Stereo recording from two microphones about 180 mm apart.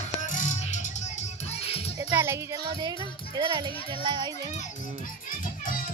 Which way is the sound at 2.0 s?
15° right (ahead or behind).